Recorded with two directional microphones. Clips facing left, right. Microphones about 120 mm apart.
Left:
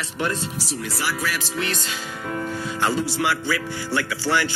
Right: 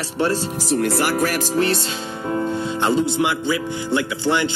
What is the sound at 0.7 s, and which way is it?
Speech, 60° right (ahead or behind).